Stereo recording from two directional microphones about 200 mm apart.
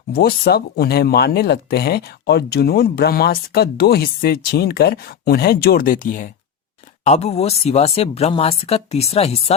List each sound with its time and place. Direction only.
0.1 s speech: 50° left (ahead or behind); by 9.4 s 30° left (ahead or behind)